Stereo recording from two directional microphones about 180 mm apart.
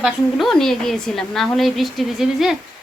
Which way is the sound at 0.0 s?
Centre (ahead or behind).